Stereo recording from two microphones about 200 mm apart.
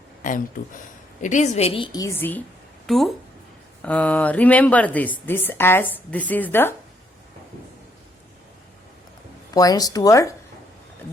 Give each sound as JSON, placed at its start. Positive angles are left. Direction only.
{"t": 0.2, "sound": "a woman's voice", "side_deg": 40}
{"t": 9.5, "sound": "speech", "side_deg": 20}